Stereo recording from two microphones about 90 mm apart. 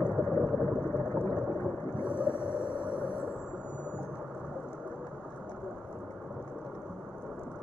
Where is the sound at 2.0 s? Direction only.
60° right (ahead or behind).